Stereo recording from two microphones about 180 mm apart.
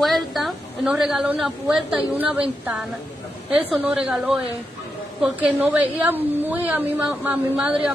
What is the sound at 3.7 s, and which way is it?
Speech, 5° right (ahead or behind).